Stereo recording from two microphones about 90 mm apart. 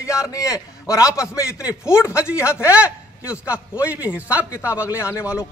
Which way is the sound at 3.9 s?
15° right (ahead or behind).